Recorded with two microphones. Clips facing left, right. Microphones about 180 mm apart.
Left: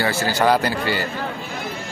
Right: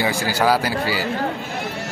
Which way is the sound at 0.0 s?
10° right (ahead or behind).